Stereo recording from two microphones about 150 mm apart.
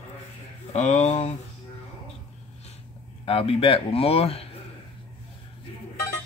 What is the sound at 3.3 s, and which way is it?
Speech, 40° left (ahead or behind).